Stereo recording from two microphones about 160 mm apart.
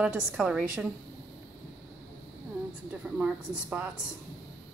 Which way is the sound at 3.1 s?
10° right (ahead or behind).